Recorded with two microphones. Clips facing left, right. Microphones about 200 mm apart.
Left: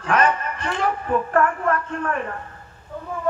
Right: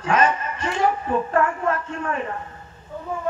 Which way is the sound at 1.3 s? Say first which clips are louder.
Left 2 dB; 20° right (ahead or behind).